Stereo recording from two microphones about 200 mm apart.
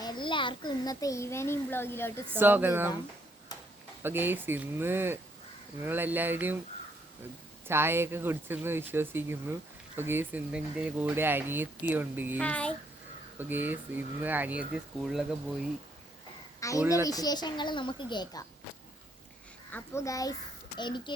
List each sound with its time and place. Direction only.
0.0 s a child's voice: 20° left (ahead or behind)
2.4 s speech: 10° right (ahead or behind)
4.0 s speech: 10° right (ahead or behind)
7.7 s speech: 10° right (ahead or behind)
12.4 s a child's voice: 5° left (ahead or behind)
13.4 s speech: 10° right (ahead or behind)
16.6 s a woman's voice: 15° left (ahead or behind)
19.7 s a child's voice: 15° left (ahead or behind)